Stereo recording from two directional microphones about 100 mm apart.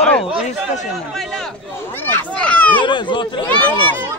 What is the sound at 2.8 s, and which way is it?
Speech, 50° left (ahead or behind).